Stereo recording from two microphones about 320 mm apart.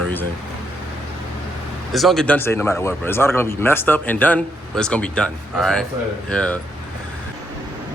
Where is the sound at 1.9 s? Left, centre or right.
Centre.